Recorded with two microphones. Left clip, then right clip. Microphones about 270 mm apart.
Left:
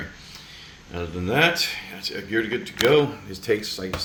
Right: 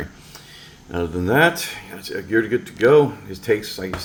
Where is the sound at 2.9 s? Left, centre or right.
Centre.